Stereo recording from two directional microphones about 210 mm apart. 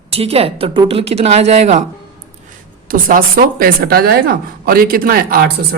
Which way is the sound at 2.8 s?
40° right (ahead or behind).